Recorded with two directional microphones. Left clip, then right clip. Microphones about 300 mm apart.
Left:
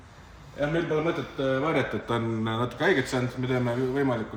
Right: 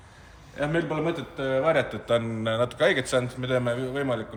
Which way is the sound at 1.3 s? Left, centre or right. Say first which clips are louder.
Right 4 dB; centre.